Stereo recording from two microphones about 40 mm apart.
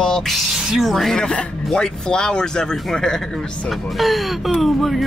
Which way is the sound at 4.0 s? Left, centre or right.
Centre.